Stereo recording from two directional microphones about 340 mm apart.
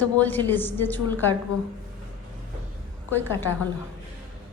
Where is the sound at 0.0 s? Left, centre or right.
Centre.